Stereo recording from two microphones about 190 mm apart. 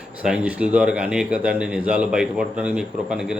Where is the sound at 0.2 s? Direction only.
5° right (ahead or behind).